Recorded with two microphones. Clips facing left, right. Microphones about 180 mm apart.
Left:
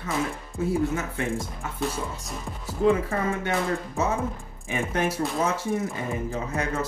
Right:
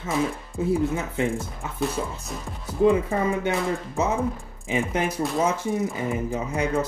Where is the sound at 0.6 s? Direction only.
20° right (ahead or behind).